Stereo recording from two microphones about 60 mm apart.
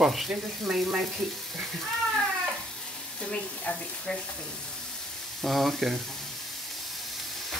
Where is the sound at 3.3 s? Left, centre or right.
Left.